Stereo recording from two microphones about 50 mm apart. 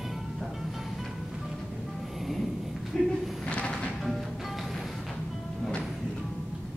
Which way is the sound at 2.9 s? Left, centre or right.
Centre.